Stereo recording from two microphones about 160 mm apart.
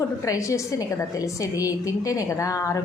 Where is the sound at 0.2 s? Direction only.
20° left (ahead or behind).